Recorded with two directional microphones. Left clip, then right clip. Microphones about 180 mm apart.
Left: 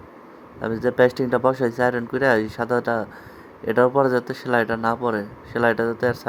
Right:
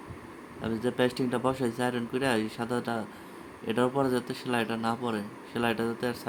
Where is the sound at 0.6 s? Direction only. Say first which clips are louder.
Left 10 dB; 35° left (ahead or behind).